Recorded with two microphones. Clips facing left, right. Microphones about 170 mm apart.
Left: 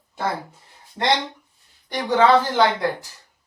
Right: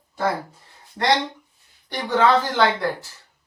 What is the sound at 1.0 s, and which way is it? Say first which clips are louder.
Speech: even; 20° left (ahead or behind).